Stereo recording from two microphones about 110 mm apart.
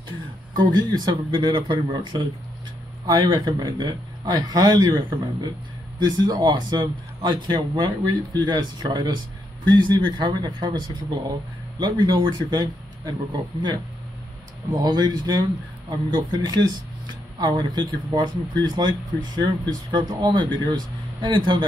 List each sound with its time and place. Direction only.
0.6 s a man's voice: 40° right (ahead or behind)